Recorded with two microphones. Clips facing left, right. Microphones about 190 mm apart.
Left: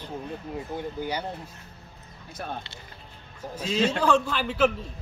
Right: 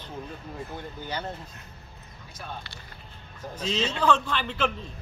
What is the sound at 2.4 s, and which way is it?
Speech, 55° left (ahead or behind).